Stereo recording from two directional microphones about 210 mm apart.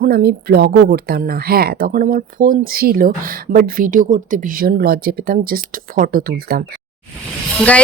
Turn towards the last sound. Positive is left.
turn(degrees=5)  # may be behind; listen again after turning